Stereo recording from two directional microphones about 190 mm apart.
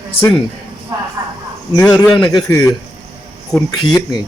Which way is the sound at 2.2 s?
20° left (ahead or behind).